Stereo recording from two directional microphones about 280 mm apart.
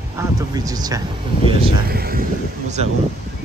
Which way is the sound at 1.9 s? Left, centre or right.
Right.